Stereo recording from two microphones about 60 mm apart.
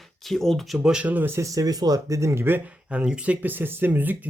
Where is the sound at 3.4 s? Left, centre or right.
Right.